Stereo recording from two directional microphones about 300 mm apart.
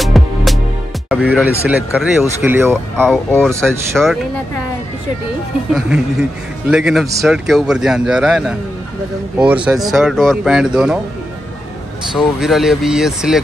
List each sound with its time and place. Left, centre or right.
0.0 s music: centre
1.0 s a man's voice: centre
5.7 s a man's voice: centre
9.7 s a man's voice: centre
12.2 s a man's voice: centre